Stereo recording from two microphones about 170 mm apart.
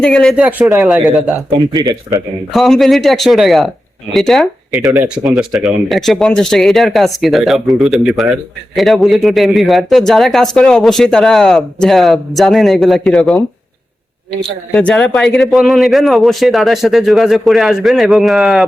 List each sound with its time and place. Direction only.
0.0 s speech: 5° left (ahead or behind)
1.5 s speech: 25° right (ahead or behind)
2.5 s speech: centre (ahead or behind)
14.7 s speech: 5° left (ahead or behind)